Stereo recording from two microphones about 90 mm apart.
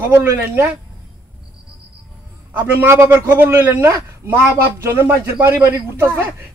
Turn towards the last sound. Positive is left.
turn(degrees=-30)  # may be behind; listen again after turning